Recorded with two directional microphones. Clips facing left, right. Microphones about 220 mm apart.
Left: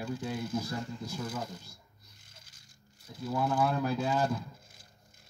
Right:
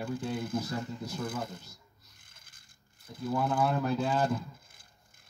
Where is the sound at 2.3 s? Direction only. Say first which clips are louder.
Left 4 dB; 55° right (ahead or behind).